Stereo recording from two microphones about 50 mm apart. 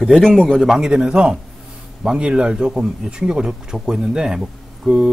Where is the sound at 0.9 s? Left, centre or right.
Centre.